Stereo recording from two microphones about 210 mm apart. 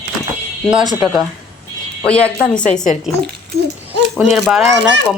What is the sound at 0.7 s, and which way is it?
Speech, 5° right (ahead or behind).